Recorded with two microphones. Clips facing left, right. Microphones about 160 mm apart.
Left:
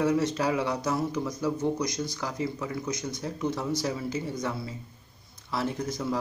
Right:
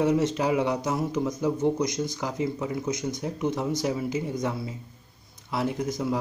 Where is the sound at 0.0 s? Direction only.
20° right (ahead or behind).